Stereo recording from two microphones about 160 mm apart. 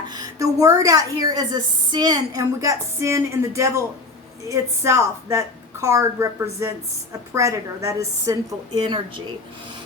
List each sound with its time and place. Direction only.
0.1 s a woman's voice: 25° right (ahead or behind)